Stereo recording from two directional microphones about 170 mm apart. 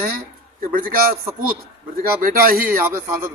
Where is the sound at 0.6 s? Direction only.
55° right (ahead or behind).